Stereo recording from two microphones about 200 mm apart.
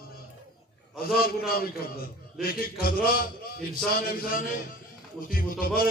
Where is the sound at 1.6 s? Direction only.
50° left (ahead or behind).